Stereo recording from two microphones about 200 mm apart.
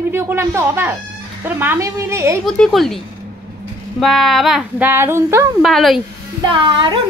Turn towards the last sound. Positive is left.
turn(degrees=-25)  # may be behind; listen again after turning